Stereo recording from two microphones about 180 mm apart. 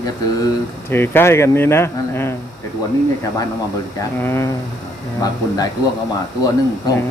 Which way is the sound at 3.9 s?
15° left (ahead or behind).